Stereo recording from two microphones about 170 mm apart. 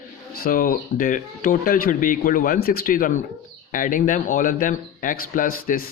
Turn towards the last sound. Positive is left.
turn(degrees=55)  # may be behind; listen again after turning